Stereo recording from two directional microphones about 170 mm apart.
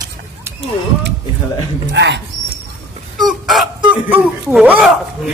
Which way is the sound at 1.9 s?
90° right.